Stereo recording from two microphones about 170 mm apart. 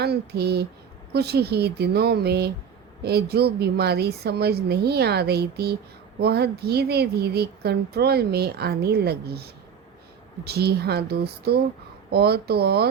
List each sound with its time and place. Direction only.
0.0 s speech: 70° right (ahead or behind)